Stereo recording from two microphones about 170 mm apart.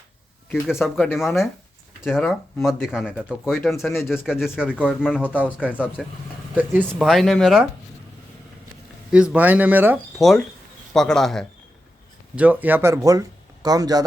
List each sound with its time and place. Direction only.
0.5 s speech: centre (ahead or behind)
7.1 s speech: centre (ahead or behind)
9.1 s speech: 5° right (ahead or behind)
10.2 s speech: centre (ahead or behind)
12.4 s speech: 10° right (ahead or behind)